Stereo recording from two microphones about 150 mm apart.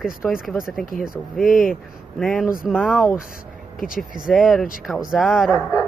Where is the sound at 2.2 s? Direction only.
Centre (ahead or behind).